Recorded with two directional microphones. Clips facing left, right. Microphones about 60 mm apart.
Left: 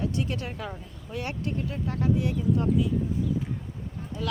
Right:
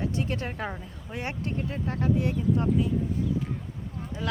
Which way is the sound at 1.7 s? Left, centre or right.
Right.